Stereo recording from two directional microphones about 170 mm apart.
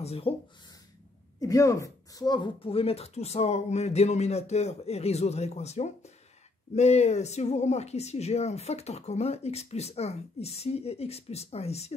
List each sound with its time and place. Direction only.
0.0 s speech: 35° left (ahead or behind)
1.4 s speech: 20° left (ahead or behind); by 11.9 s 40° left (ahead or behind)